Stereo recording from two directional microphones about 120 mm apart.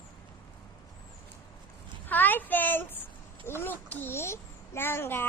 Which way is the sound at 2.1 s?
15° left (ahead or behind).